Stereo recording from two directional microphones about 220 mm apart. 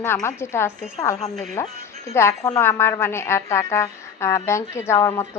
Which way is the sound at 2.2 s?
10° left (ahead or behind).